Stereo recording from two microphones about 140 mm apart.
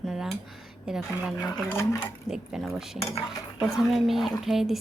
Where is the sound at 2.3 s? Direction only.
5° right (ahead or behind).